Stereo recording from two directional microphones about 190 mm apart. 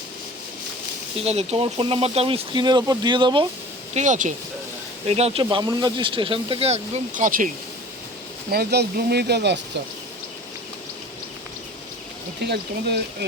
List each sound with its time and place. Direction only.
1.2 s speech: 35° right (ahead or behind)
3.9 s speech: 40° right (ahead or behind)
8.4 s speech: 55° right (ahead or behind)
12.4 s speech: 60° right (ahead or behind)